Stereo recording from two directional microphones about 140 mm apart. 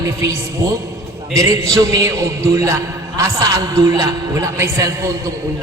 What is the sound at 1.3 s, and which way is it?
A man's voice, 25° right (ahead or behind).